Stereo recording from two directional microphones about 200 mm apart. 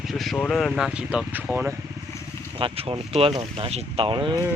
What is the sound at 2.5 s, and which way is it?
Speech, 30° right (ahead or behind).